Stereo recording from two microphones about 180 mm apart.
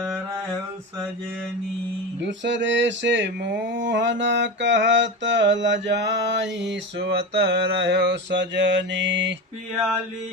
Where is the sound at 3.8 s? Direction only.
80° right.